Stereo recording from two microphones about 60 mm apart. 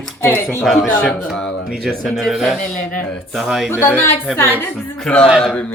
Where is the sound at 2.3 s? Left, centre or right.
Centre.